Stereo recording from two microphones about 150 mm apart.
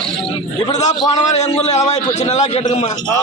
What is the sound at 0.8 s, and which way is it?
A man's voice, 50° left (ahead or behind).